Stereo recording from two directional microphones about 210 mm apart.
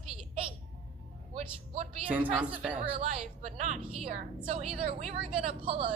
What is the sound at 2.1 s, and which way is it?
Speech, 5° right (ahead or behind).